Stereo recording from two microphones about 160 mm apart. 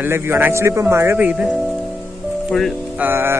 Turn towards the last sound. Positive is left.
turn(degrees=-15)  # may be behind; listen again after turning